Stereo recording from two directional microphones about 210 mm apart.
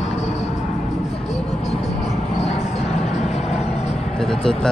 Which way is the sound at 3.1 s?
30° left (ahead or behind).